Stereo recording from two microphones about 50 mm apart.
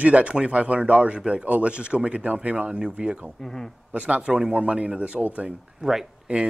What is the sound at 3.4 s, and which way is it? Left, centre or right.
Speech, centre.